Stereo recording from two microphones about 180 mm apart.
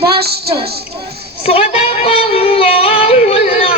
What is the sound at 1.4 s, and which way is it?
Yodeling, 35° left (ahead or behind).